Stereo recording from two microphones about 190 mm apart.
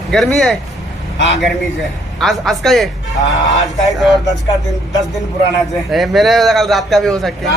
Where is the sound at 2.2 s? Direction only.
Centre (ahead or behind).